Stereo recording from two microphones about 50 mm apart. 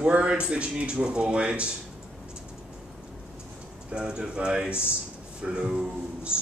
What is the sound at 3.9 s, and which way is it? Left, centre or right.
Speech, centre.